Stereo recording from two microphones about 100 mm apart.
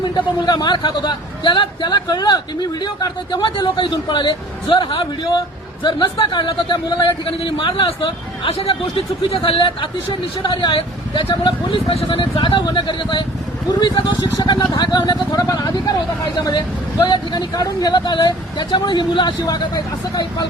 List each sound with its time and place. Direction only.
0.0 s a man's voice: 45° left (ahead or behind)
11.4 s a man's voice: 60° left (ahead or behind); by 20.5 s 45° left (ahead or behind)